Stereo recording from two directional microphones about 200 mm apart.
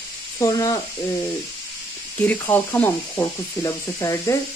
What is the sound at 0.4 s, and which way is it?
Speech, 20° left (ahead or behind).